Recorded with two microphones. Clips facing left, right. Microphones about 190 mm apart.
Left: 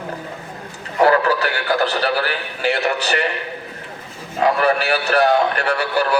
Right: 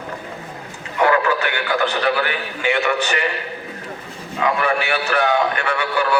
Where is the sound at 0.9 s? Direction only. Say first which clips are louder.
Left 2 dB; 35° left (ahead or behind).